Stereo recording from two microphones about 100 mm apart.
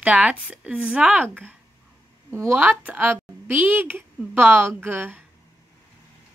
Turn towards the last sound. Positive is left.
turn(degrees=-20)  # may be behind; listen again after turning